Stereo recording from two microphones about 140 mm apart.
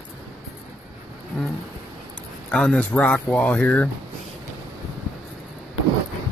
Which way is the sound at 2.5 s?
5° left (ahead or behind).